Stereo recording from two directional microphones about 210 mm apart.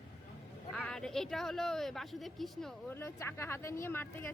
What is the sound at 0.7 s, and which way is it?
Speech, 5° left (ahead or behind).